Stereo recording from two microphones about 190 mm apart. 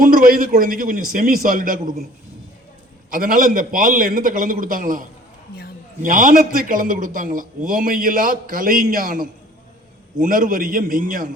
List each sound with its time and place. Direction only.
0.0 s a man's voice: 50° right (ahead or behind)
3.1 s a man's voice: 50° right (ahead or behind)